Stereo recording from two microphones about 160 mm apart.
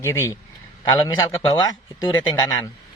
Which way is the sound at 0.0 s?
15° left (ahead or behind).